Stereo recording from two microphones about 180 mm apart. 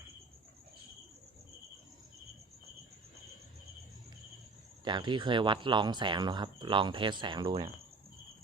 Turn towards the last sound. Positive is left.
turn(degrees=-25)  # may be behind; listen again after turning